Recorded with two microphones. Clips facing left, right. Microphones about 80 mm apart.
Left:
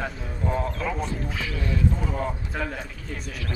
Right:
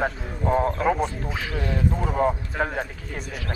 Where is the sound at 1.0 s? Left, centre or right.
Right.